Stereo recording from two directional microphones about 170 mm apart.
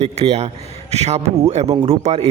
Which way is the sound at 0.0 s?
40° right (ahead or behind).